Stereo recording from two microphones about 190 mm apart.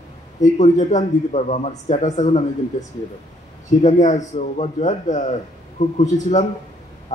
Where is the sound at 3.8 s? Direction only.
40° left (ahead or behind).